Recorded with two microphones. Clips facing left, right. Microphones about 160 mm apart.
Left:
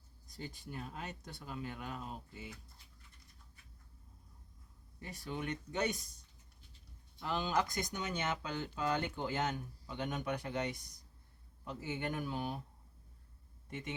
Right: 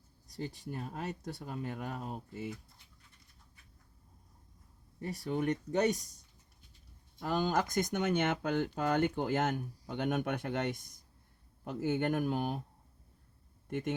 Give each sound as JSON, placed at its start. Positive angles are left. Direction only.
{"t": 0.3, "sound": "speech", "side_deg": -40}
{"t": 4.9, "sound": "speech", "side_deg": -40}
{"t": 7.2, "sound": "speech", "side_deg": -45}
{"t": 13.7, "sound": "speech", "side_deg": -55}